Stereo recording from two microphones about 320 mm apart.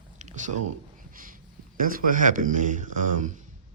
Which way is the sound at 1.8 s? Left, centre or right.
Right.